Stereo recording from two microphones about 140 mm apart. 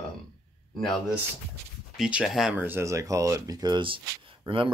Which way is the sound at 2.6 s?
15° right (ahead or behind).